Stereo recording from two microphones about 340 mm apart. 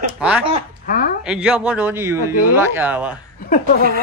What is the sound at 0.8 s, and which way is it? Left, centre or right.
Speech, left.